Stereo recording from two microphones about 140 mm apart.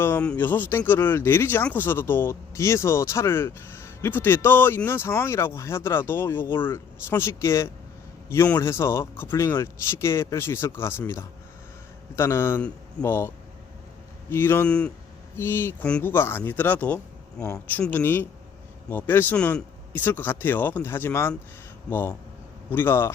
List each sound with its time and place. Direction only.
0.0 s speech: 10° left (ahead or behind)